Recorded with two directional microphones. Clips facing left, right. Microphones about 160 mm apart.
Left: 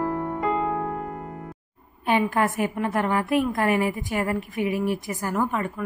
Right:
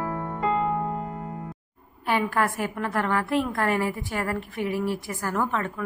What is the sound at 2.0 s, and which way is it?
A woman's voice, 20° left (ahead or behind).